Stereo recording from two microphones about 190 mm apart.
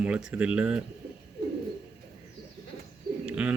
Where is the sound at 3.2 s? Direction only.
5° right (ahead or behind).